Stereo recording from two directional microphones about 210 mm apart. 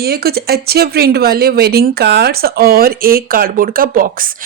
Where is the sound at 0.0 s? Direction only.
50° right (ahead or behind).